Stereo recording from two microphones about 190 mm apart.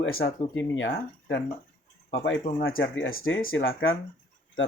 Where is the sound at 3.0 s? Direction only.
90° left.